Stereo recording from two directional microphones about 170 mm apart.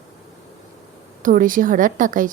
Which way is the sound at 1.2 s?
55° right (ahead or behind).